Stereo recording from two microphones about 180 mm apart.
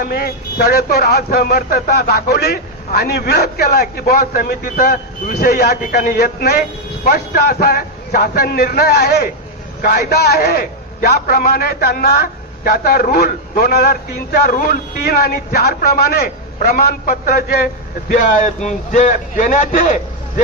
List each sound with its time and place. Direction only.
0.0 s a man's voice: 55° left (ahead or behind)
18.9 s a man's voice: 45° left (ahead or behind)